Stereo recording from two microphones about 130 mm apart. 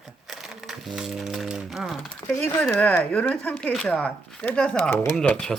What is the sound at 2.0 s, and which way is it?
Speech, 20° left (ahead or behind).